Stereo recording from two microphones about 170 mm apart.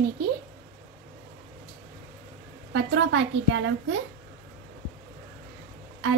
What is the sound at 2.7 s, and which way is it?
A woman's voice, 90° right.